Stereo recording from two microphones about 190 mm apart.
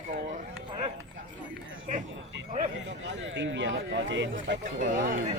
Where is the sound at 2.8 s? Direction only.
75° right (ahead or behind).